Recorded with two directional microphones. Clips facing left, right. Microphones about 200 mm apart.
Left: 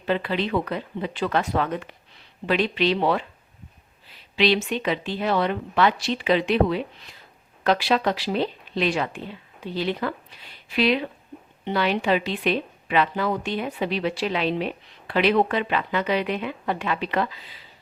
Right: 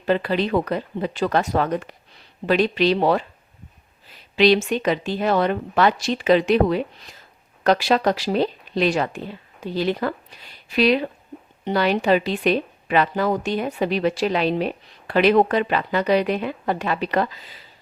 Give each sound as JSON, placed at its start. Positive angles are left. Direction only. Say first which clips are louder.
{"t": 0.0, "sound": "speech", "louder": "right 4 dB", "side_deg": -40}